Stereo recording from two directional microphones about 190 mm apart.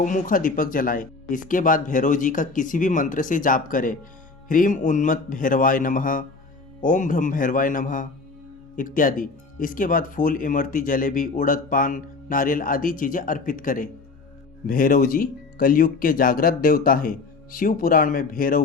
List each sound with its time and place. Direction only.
0.0 s speech: 45° left (ahead or behind)